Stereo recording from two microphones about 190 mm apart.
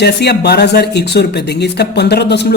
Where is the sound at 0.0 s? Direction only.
60° left (ahead or behind).